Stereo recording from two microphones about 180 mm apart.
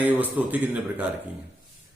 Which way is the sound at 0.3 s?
10° right (ahead or behind).